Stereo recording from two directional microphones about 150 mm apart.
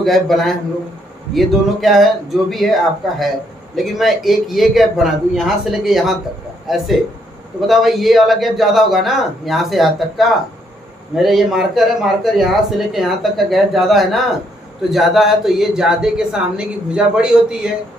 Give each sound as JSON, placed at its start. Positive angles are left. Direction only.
{"t": 0.0, "sound": "speech", "side_deg": 0}
{"t": 7.7, "sound": "speech", "side_deg": 0}